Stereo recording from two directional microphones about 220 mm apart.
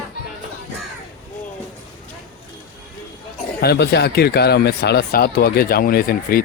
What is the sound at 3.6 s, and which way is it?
Speech, 50° left (ahead or behind).